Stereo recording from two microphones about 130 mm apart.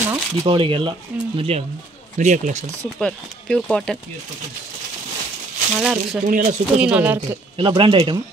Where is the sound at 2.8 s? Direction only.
5° left (ahead or behind).